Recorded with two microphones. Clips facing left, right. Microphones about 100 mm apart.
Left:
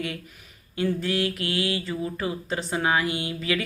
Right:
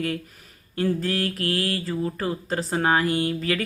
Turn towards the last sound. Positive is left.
turn(degrees=-40)  # may be behind; listen again after turning